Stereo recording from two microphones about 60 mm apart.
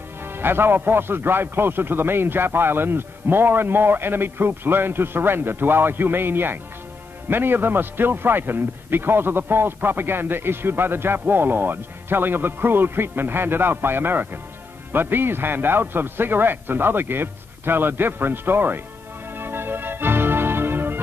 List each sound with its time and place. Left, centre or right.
0.2 s a man's voice: right
19.3 s music: right